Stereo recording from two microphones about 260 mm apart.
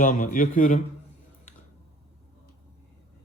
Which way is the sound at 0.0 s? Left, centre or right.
Left.